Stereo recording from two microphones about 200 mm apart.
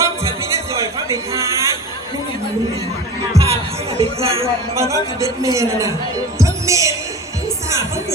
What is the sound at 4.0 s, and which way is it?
Speech, 30° right (ahead or behind).